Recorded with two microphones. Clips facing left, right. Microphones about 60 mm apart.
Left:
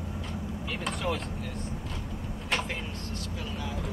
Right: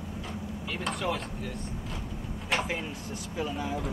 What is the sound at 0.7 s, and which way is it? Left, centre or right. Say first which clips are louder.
Chop: right 1 dB; centre.